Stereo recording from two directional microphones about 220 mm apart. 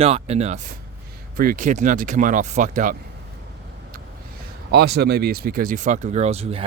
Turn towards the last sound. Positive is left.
turn(degrees=-25)  # may be behind; listen again after turning